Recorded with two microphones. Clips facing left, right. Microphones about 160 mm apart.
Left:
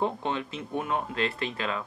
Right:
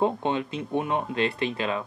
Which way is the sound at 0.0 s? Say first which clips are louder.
Right 4 dB; 20° right (ahead or behind).